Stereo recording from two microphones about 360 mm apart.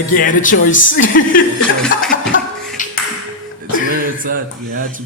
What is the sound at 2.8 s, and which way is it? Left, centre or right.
Ping, left.